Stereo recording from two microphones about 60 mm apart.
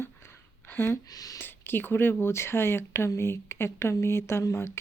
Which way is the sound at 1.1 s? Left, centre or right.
Left.